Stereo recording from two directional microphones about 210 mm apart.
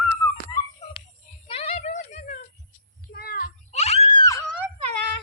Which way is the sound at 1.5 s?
30° left (ahead or behind).